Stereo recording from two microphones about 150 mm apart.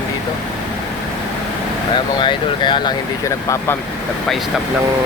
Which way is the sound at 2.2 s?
30° left (ahead or behind).